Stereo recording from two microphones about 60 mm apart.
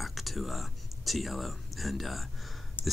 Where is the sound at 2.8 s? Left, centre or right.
Left.